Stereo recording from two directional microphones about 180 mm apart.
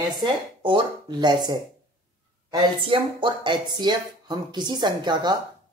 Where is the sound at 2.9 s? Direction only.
25° right (ahead or behind).